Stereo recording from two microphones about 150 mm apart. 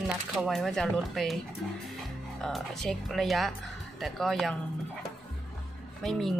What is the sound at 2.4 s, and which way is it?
Speech, 5° left (ahead or behind).